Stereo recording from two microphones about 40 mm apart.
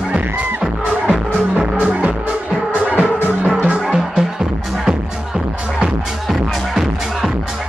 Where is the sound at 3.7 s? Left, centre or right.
Right.